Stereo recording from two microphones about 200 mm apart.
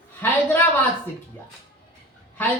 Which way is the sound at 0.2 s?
10° left (ahead or behind).